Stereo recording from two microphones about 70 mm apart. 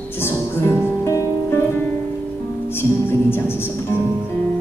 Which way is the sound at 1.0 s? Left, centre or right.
Left.